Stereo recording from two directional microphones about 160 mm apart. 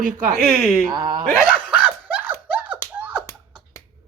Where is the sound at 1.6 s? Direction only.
10° right (ahead or behind).